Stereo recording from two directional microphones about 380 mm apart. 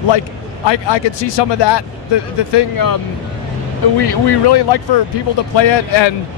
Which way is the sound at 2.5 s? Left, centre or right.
Left.